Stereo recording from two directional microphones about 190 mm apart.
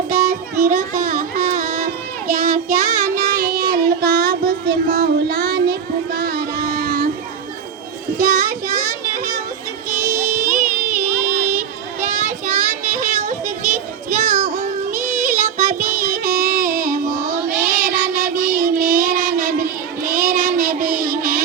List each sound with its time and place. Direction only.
0.1 s music: 40° right (ahead or behind)
6.1 s child singing: 50° right (ahead or behind)
8.2 s child singing: 45° right (ahead or behind)
9.0 s children playing: 45° right (ahead or behind)
10.0 s music: 40° right (ahead or behind)
11.3 s a sound: 10° right (ahead or behind)
11.9 s child singing: 40° right (ahead or behind)